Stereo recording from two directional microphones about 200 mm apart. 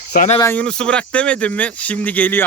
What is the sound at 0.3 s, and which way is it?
Speech, 10° left (ahead or behind).